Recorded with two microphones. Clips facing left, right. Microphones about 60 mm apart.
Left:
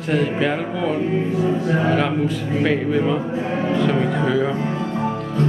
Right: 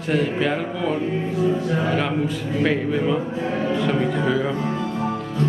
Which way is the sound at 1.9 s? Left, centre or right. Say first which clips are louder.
Left 3 dB; centre.